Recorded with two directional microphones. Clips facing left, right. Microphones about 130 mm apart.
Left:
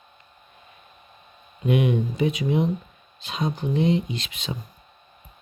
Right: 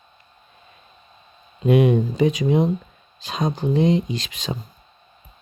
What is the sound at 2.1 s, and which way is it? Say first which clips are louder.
Speech: right 5 dB; 90° right.